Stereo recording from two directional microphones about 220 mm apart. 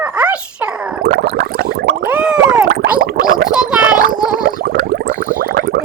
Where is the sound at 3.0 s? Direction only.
40° right (ahead or behind).